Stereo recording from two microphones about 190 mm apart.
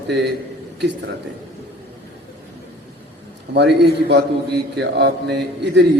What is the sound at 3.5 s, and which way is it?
A man's voice, 60° right (ahead or behind).